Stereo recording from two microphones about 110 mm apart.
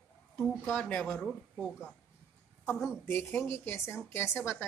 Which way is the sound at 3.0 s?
20° left (ahead or behind).